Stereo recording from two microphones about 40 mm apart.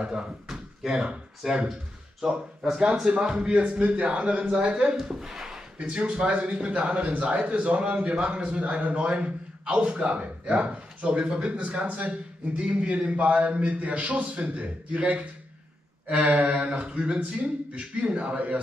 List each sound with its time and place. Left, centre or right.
0.0 s a man's voice: right
0.5 s a sound: centre
1.4 s speech: centre
3.3 s a man's voice: right
4.9 s speech: centre
6.0 s a man's voice: right
11.4 s a man's voice: right